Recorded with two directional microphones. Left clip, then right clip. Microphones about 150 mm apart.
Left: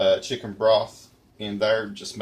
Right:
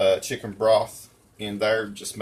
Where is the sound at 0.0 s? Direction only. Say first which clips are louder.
Even; 15° left (ahead or behind).